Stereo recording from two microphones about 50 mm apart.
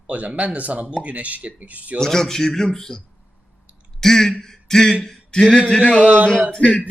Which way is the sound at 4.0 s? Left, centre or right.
Centre.